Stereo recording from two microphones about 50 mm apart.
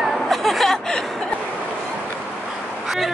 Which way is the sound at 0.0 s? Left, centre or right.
Centre.